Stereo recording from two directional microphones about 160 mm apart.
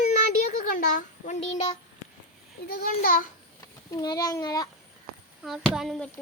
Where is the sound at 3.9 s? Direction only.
25° left (ahead or behind).